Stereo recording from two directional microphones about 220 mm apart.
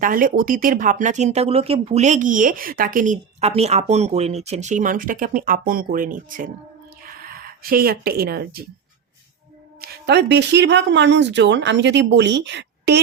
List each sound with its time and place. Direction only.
0.0 s speech: 40° right (ahead or behind)
9.8 s speech: 45° right (ahead or behind)